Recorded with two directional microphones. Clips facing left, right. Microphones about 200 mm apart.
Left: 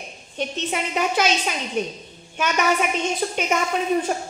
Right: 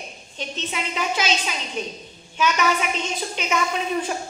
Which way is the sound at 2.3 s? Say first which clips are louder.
Even; 50° left (ahead or behind).